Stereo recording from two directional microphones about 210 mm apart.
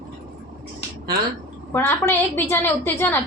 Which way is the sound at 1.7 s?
10° left (ahead or behind).